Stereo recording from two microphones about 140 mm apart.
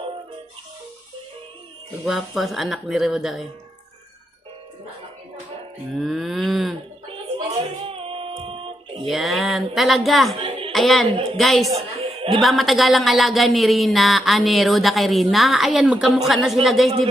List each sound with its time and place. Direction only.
2.0 s speech: centre (ahead or behind)
6.0 s speech: centre (ahead or behind)
7.3 s a sound: 40° right (ahead or behind)
9.0 s speech: centre (ahead or behind)
10.3 s music: 40° right (ahead or behind)
10.7 s a woman's voice: centre (ahead or behind)
11.9 s a sound: 40° right (ahead or behind)
12.4 s speech: centre (ahead or behind)